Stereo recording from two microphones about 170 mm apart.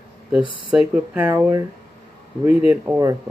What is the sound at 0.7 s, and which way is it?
Speech, 10° right (ahead or behind).